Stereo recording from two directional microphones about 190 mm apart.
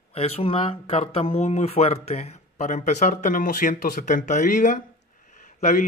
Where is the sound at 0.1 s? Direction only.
30° left (ahead or behind).